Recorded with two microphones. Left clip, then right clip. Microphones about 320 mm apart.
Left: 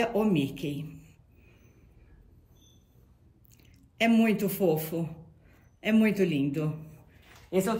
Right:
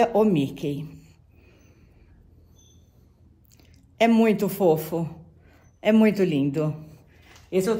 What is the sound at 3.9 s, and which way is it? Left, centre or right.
A man's voice, centre.